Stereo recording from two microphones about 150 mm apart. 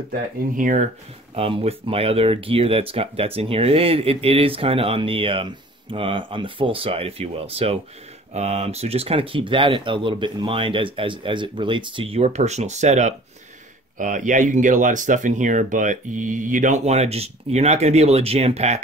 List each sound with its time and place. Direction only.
0.1 s speech: 60° right (ahead or behind)
1.3 s speech: 40° right (ahead or behind)
13.9 s speech: 60° right (ahead or behind); by 18.8 s 45° right (ahead or behind)